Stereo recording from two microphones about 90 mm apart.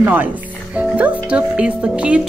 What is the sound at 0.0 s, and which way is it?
Speech, 20° right (ahead or behind).